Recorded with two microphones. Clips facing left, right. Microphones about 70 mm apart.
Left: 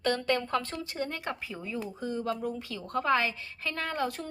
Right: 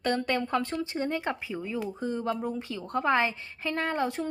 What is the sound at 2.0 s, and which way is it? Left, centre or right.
A woman's voice, right.